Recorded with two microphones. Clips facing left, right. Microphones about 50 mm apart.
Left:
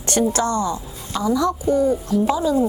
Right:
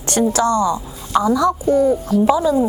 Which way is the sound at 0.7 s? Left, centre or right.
Right.